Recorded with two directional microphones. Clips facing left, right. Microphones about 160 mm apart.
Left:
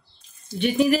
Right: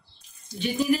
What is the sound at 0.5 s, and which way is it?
Speech, 65° left (ahead or behind).